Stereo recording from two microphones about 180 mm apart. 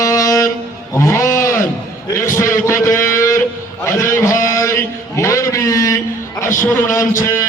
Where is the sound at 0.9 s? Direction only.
15° left (ahead or behind).